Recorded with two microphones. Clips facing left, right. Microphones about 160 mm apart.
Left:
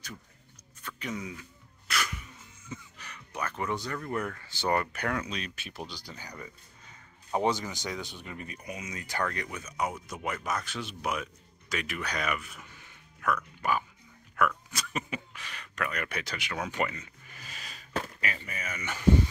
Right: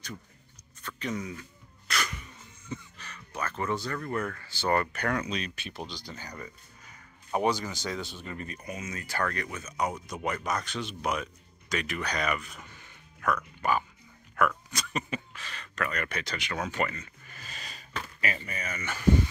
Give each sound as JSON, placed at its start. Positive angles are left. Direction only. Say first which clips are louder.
{"t": 0.8, "sound": "speech", "louder": "right 3 dB", "side_deg": 10}
{"t": 1.9, "sound": "music", "louder": "even", "side_deg": 5}
{"t": 2.7, "sound": "speech", "louder": "right 3 dB", "side_deg": 15}